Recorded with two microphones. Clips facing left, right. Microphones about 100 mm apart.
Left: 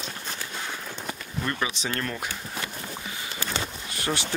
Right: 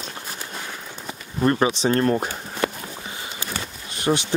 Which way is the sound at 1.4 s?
40° right (ahead or behind).